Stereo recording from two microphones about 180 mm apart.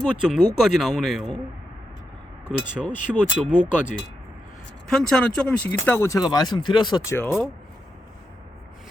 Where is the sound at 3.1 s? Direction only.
10° right (ahead or behind).